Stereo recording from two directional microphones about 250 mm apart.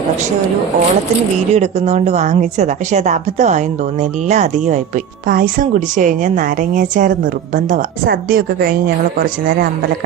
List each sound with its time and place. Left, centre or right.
1.5 s a woman's voice: right